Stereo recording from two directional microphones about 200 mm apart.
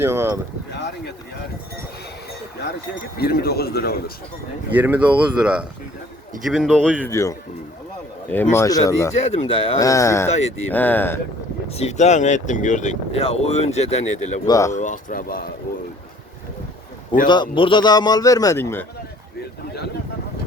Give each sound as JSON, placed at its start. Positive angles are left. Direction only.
{"t": 0.0, "sound": "speech", "side_deg": -10}
{"t": 3.2, "sound": "speech", "side_deg": 50}
{"t": 4.7, "sound": "speech", "side_deg": -10}
{"t": 7.0, "sound": "speech", "side_deg": 15}
{"t": 9.2, "sound": "speech", "side_deg": 30}
{"t": 10.2, "sound": "speech", "side_deg": 35}
{"t": 10.7, "sound": "speech", "side_deg": 10}
{"t": 11.7, "sound": "speech", "side_deg": 35}
{"t": 14.4, "sound": "speech", "side_deg": 20}
{"t": 14.7, "sound": "speech", "side_deg": 40}
{"t": 17.2, "sound": "a man's voice", "side_deg": 25}